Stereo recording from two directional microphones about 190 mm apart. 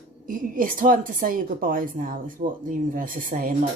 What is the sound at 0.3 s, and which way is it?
Speech, 45° right (ahead or behind).